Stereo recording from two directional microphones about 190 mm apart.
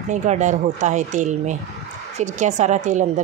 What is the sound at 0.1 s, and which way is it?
Speech, 40° right (ahead or behind).